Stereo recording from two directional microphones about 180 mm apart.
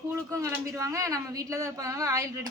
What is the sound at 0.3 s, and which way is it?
A woman's voice, 15° right (ahead or behind).